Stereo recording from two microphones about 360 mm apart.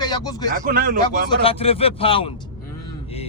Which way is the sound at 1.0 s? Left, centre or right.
Centre.